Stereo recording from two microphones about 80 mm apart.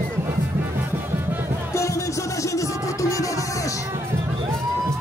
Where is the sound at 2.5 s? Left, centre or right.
Left.